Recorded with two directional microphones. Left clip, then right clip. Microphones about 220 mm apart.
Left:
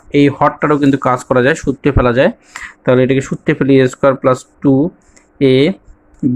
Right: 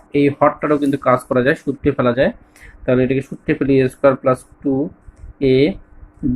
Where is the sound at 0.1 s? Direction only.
40° left (ahead or behind).